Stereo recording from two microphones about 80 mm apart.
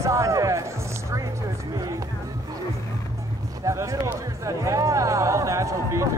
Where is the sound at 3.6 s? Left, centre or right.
Right.